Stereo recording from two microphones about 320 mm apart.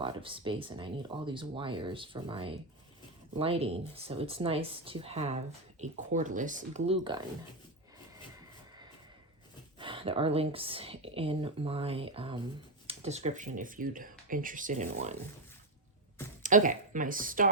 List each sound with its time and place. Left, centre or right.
0.0 s speech: centre
9.7 s speech: centre
16.4 s speech: right